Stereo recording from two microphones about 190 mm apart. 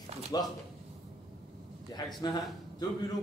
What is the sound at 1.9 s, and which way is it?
Speech, 20° left (ahead or behind).